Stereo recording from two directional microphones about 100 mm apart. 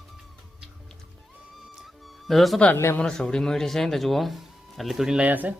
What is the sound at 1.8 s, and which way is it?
Music, centre (ahead or behind).